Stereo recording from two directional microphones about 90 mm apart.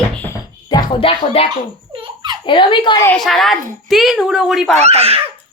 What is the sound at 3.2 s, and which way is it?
A woman's voice, centre (ahead or behind).